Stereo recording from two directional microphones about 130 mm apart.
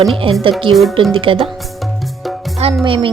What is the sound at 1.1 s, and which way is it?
Speech, 45° right (ahead or behind).